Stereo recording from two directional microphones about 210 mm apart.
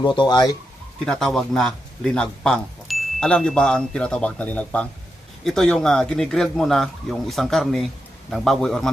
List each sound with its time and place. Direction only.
0.0 s speech: 20° left (ahead or behind)
1.0 s a man's voice: 5° left (ahead or behind)